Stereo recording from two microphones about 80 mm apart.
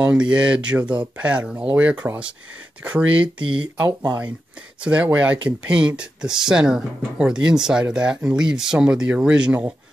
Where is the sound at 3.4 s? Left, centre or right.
Right.